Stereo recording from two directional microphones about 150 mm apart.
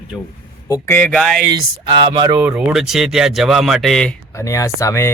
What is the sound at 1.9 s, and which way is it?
Speech, 30° right (ahead or behind).